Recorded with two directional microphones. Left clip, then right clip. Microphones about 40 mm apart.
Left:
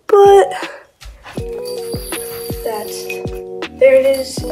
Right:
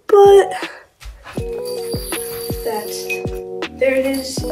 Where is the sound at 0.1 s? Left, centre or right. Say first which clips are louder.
Left 1 dB; left.